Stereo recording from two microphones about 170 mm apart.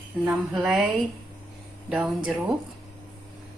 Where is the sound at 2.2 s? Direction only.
5° right (ahead or behind).